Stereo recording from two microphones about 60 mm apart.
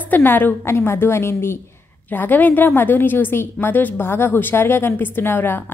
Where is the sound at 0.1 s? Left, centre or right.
Left.